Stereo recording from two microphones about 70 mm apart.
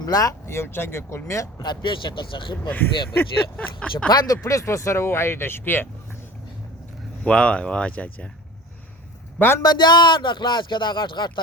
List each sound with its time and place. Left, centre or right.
0.0 s speech: left
0.4 s speech: left
1.6 s speech: left
2.6 s speech: left
4.1 s speech: left
4.4 s speech: left
7.3 s speech: centre
9.6 s speech: left